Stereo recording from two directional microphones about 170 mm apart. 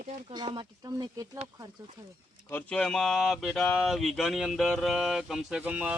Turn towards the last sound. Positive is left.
turn(degrees=-5)  # may be behind; listen again after turning